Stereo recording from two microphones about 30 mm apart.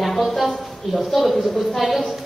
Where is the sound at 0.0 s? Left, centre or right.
Centre.